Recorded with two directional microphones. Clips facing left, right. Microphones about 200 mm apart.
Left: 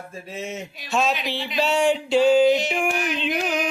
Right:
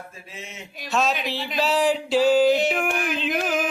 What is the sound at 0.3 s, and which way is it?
Speech, 40° left (ahead or behind).